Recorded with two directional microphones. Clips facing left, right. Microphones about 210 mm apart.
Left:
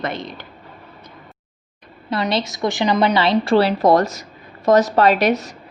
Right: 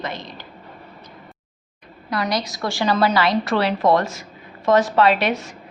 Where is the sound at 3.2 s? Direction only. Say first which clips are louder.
Left 4 dB; 25° left (ahead or behind).